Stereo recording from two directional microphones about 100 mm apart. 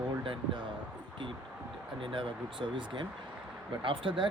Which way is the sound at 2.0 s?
60° right (ahead or behind).